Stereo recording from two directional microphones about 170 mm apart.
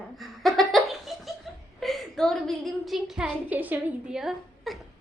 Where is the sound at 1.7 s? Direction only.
Centre (ahead or behind).